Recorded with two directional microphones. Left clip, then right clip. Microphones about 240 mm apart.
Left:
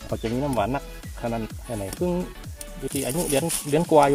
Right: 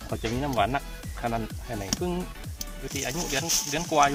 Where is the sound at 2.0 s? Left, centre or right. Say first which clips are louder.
Left 5 dB; centre.